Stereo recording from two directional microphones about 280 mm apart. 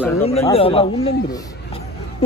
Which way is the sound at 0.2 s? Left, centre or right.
Left.